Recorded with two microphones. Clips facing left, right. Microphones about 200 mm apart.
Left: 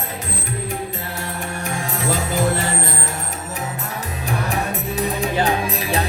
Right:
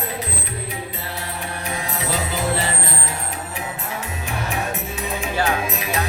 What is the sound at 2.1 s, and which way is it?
Music, 45° left (ahead or behind).